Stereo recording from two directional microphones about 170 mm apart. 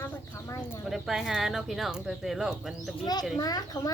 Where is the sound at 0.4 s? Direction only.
15° left (ahead or behind).